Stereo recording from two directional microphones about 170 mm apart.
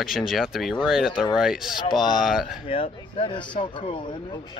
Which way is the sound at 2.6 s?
35° left (ahead or behind).